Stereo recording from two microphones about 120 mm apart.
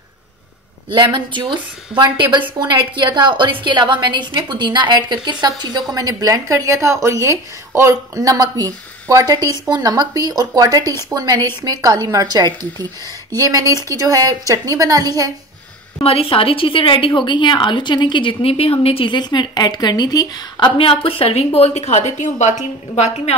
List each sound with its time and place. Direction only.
0.8 s a woman's voice: 40° right (ahead or behind)
16.0 s a woman's voice: 55° left (ahead or behind)